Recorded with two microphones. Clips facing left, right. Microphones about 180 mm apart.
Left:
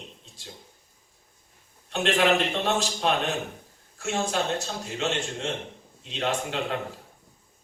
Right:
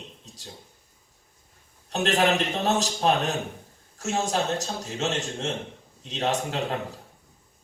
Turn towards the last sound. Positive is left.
turn(degrees=-40)  # may be behind; listen again after turning